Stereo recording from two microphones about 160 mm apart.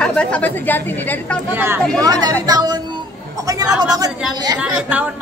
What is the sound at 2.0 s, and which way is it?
Speech, 25° right (ahead or behind).